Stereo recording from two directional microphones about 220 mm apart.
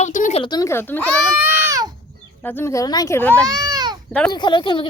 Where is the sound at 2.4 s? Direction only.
10° left (ahead or behind).